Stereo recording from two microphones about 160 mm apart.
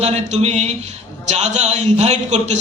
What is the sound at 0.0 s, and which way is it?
A woman's voice, 45° right (ahead or behind).